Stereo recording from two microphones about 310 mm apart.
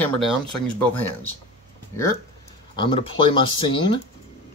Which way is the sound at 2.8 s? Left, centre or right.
Centre.